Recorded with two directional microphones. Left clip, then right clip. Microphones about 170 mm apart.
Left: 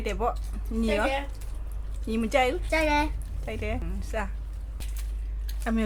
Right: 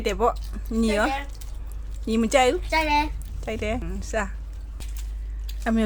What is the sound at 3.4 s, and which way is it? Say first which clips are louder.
Speech: right 5 dB; 45° right (ahead or behind).